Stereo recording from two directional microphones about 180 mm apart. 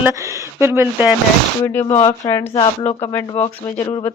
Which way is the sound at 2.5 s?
30° left (ahead or behind).